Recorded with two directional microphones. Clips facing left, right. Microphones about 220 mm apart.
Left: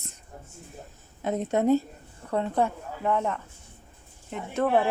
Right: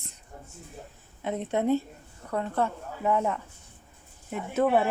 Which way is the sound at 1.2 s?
40° left (ahead or behind).